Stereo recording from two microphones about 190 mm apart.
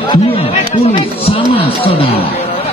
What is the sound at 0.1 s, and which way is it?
Chatter, 30° left (ahead or behind).